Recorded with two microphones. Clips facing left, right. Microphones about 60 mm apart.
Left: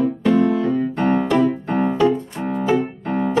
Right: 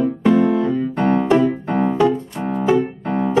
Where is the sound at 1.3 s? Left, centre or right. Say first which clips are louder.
Right 2 dB; right.